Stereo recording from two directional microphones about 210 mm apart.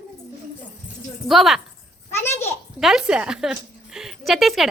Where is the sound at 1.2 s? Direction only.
Centre (ahead or behind).